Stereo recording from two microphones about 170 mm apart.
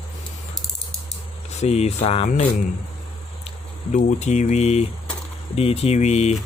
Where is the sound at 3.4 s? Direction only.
45° left (ahead or behind).